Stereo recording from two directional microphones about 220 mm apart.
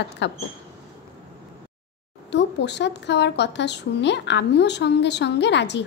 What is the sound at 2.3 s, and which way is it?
A woman's voice, 50° left (ahead or behind).